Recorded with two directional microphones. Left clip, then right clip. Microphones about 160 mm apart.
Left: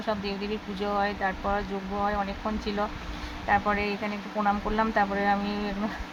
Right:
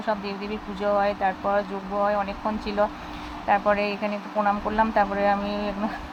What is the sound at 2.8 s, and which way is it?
Speech, 15° right (ahead or behind).